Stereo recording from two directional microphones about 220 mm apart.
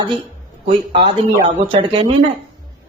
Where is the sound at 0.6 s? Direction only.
25° right (ahead or behind).